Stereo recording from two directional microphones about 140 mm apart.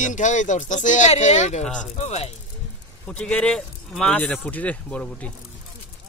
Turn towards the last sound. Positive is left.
turn(degrees=10)  # may be behind; listen again after turning